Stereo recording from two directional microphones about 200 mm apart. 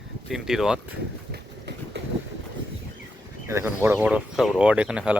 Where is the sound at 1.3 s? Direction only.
55° right (ahead or behind).